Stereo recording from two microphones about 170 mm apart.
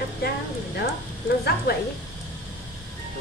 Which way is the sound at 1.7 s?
65° left (ahead or behind).